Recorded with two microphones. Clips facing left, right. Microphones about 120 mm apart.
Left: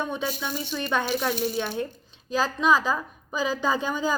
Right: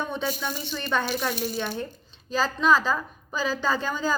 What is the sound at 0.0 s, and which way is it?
A woman's voice, 10° left (ahead or behind).